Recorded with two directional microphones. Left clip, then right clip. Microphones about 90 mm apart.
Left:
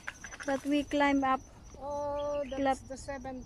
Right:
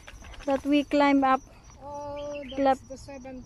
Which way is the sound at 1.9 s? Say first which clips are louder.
Left 2 dB; 25° right (ahead or behind).